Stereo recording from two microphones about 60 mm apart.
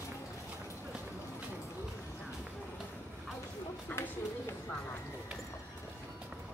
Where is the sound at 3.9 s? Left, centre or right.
Left.